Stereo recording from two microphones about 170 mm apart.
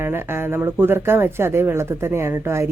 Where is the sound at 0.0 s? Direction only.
15° right (ahead or behind).